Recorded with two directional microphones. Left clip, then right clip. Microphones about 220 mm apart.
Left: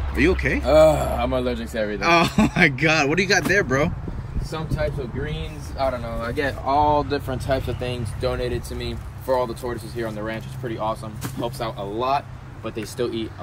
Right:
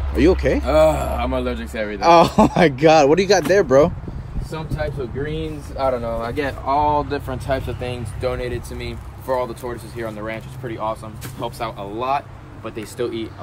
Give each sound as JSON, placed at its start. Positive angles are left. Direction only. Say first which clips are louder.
{"t": 0.1, "sound": "speech", "louder": "right 4 dB", "side_deg": -10}
{"t": 5.3, "sound": "speech", "louder": "right 6 dB", "side_deg": -45}
{"t": 6.6, "sound": "speech", "louder": "right 1 dB", "side_deg": 0}